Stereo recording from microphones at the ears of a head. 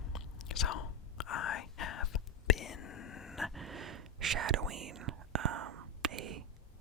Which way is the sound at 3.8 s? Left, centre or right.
Right.